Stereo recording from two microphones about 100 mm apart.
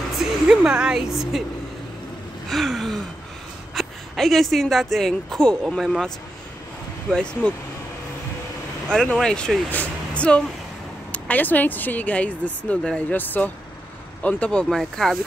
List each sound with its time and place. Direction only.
0.2 s speech: 5° right (ahead or behind)
2.5 s speech: centre (ahead or behind)
8.9 s speech: 5° left (ahead or behind)